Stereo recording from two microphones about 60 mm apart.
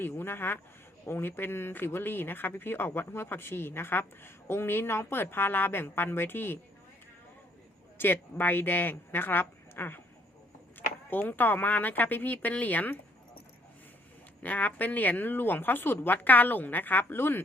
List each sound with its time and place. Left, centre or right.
0.0 s speech: left
7.9 s speech: left
14.4 s speech: left